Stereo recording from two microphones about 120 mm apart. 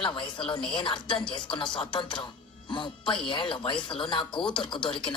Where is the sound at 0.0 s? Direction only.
45° left (ahead or behind).